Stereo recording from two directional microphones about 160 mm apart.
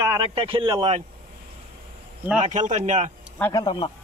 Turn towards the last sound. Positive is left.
turn(degrees=25)  # may be behind; listen again after turning